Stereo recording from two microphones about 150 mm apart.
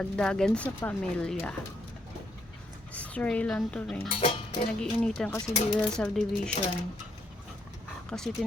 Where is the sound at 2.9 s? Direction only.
10° left (ahead or behind).